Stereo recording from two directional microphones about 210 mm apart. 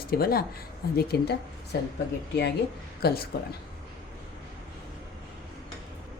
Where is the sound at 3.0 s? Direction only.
45° left (ahead or behind).